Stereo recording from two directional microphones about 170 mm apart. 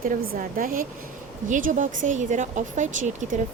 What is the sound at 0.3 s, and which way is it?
Speech, 55° right (ahead or behind).